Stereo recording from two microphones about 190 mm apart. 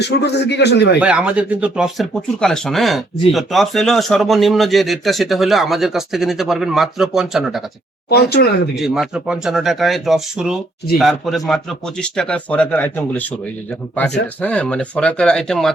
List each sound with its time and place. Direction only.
0.0 s a man's voice: 60° left (ahead or behind)
0.9 s speech: 5° right (ahead or behind)
8.1 s a man's voice: 60° left (ahead or behind)
8.7 s speech: centre (ahead or behind)
14.4 s speech: 5° left (ahead or behind)